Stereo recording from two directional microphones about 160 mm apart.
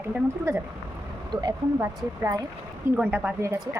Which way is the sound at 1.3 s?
25° right (ahead or behind).